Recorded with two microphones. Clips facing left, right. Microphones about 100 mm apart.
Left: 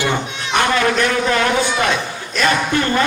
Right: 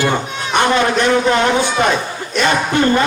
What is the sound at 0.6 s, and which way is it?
A man's voice, 25° right (ahead or behind).